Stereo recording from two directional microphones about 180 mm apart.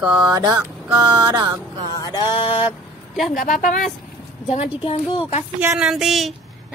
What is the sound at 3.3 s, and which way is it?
Speech, 50° left (ahead or behind).